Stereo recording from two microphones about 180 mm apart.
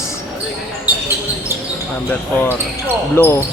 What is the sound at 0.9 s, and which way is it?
Basketball bounce, 10° right (ahead or behind).